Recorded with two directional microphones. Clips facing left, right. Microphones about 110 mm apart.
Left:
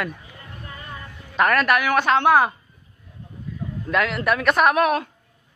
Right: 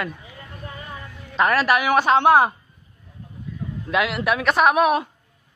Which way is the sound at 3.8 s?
5° right (ahead or behind).